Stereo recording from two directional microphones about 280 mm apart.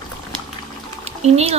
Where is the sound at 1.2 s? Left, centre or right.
Right.